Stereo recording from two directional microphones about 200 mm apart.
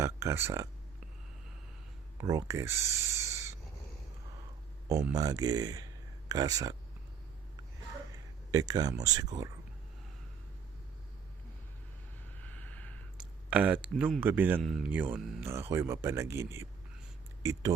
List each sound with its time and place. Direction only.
0.0 s speech: 15° right (ahead or behind)
2.1 s speech: 15° right (ahead or behind)
4.9 s speech: 15° right (ahead or behind)
8.1 s speech: 20° right (ahead or behind)
12.4 s a sound: 5° left (ahead or behind)
13.1 s a sound: 5° right (ahead or behind)
14.2 s speech: 10° right (ahead or behind)
14.6 s speech: centre (ahead or behind)
14.8 s speech: 10° right (ahead or behind)